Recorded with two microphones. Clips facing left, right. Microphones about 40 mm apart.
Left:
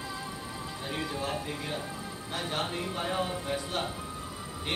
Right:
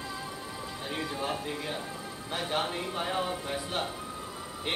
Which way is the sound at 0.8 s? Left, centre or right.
Centre.